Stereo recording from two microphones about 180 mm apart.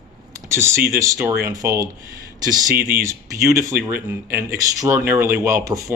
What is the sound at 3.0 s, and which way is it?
Speech, 15° right (ahead or behind).